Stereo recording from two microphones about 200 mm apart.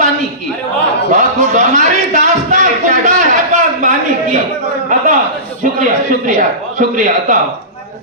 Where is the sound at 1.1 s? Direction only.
40° right (ahead or behind).